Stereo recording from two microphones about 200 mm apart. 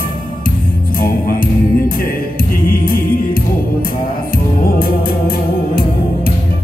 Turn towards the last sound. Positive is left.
turn(degrees=50)  # may be behind; listen again after turning